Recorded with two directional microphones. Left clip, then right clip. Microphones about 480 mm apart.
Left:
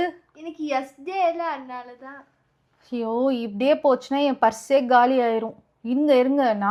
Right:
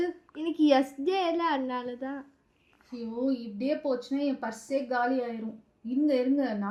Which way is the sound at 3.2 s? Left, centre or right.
Left.